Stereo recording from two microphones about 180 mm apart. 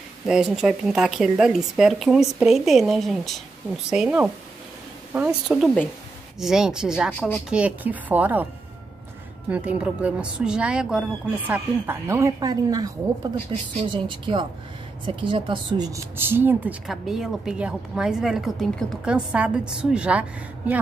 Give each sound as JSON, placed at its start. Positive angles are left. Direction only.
{"t": 0.3, "sound": "speech", "side_deg": -5}
{"t": 9.5, "sound": "speech", "side_deg": -5}